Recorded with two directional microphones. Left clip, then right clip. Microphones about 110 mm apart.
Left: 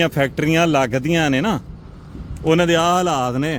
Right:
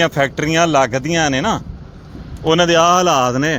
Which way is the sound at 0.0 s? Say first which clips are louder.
Right 3 dB; 90° left.